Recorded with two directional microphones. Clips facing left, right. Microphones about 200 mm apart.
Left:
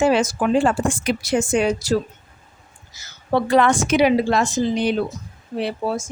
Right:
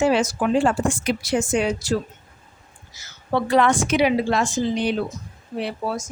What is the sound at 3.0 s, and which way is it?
A woman's voice, 40° left (ahead or behind).